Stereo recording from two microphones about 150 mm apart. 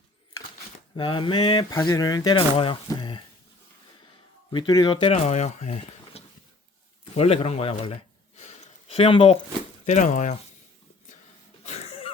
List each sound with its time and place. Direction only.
0.9 s speech: 35° left (ahead or behind)
4.5 s speech: 25° left (ahead or behind)
5.1 s speech: 50° left (ahead or behind)
8.4 s a sound: 45° left (ahead or behind)
9.8 s speech: 55° left (ahead or behind)
11.6 s throat clearing: 45° left (ahead or behind)